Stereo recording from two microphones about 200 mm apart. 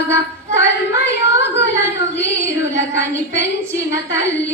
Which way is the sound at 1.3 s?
60° left (ahead or behind).